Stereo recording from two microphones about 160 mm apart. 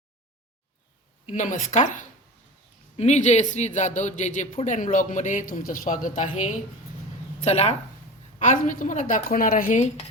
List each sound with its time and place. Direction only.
1.3 s speech: 50° left (ahead or behind)
8.4 s speech: 50° left (ahead or behind)